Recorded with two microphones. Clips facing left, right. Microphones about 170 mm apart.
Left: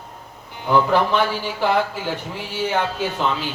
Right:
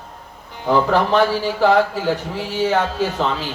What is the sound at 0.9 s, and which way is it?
Speech, 40° right (ahead or behind).